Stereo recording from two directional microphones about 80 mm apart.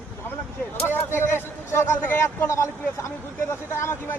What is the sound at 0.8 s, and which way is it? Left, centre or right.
Speech, left.